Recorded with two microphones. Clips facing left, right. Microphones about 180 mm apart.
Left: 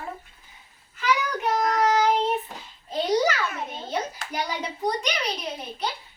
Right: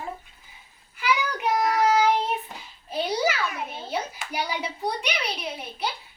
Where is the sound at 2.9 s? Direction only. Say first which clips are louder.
Left 3 dB; 10° right (ahead or behind).